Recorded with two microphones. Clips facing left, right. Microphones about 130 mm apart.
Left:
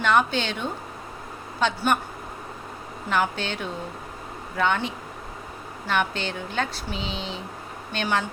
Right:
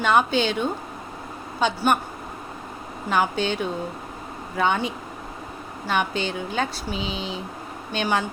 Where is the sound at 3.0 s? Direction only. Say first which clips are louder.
Right 3 dB; 15° right (ahead or behind).